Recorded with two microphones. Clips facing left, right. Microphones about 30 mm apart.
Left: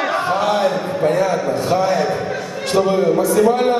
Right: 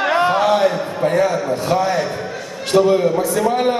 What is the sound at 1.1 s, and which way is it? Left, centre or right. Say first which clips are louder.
A man's voice: even; centre.